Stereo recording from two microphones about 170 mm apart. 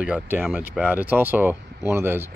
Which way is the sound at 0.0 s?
10° right (ahead or behind).